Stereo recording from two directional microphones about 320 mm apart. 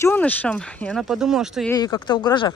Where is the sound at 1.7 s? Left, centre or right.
Centre.